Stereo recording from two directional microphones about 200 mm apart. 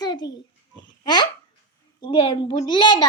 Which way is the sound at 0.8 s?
20° left (ahead or behind).